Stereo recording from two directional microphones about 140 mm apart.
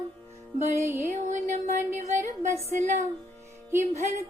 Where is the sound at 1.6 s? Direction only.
60° right (ahead or behind).